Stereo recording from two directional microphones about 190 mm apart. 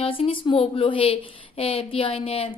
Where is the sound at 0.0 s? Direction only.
30° left (ahead or behind).